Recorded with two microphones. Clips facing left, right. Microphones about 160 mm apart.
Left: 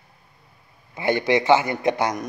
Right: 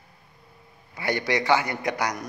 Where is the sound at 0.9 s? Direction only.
20° left (ahead or behind).